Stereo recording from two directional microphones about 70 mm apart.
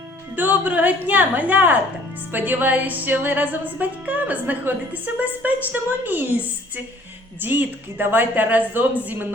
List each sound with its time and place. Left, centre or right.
0.3 s music: right